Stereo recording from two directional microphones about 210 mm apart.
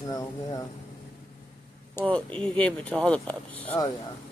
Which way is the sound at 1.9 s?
5° left (ahead or behind).